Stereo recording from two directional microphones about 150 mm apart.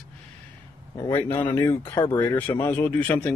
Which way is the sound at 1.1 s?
15° left (ahead or behind).